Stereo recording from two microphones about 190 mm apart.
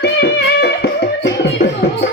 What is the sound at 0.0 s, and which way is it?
Music, 60° left (ahead or behind).